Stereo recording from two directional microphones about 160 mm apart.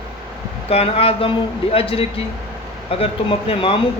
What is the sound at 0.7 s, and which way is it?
Speech, 40° left (ahead or behind).